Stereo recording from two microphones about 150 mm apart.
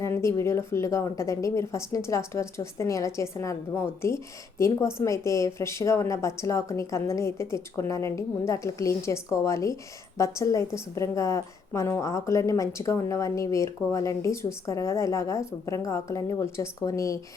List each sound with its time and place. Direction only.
0.0 s a woman's voice: 20° left (ahead or behind)